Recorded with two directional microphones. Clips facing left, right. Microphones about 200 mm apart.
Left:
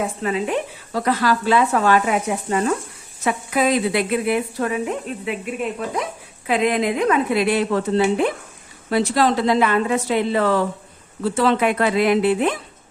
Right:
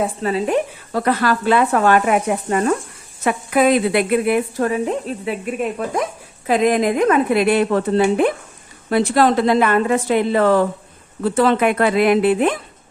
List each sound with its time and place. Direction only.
0.0 s a woman's voice: 35° right (ahead or behind)
0.9 s a woman's voice: 55° right (ahead or behind); by 5.4 s 35° right (ahead or behind)
6.5 s a woman's voice: 45° right (ahead or behind)